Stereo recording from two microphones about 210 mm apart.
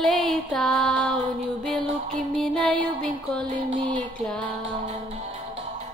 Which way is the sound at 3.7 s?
25° right (ahead or behind).